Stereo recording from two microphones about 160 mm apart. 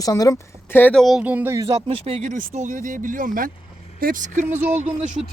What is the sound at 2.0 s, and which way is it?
A woman's voice, 45° right (ahead or behind).